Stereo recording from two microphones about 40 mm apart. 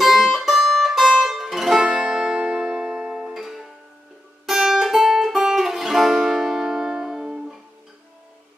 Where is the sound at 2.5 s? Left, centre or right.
Centre.